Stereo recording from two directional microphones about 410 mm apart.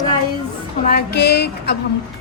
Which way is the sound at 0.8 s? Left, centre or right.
Left.